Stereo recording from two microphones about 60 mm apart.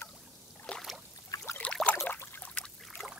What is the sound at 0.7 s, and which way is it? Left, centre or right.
Rowboat, centre.